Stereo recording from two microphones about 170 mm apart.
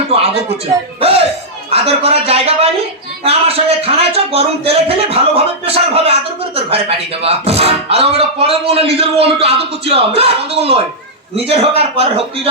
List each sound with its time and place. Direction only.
0.1 s speech: 35° right (ahead or behind)
1.7 s speech: 35° right (ahead or behind)